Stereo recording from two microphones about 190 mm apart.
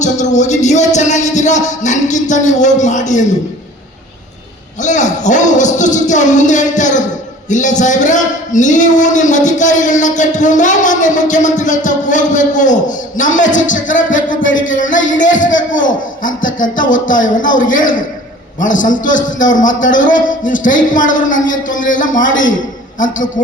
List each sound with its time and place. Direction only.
0.0 s music: 40° left (ahead or behind)
0.9 s speech: 40° left (ahead or behind)
4.8 s a man's voice: 40° left (ahead or behind)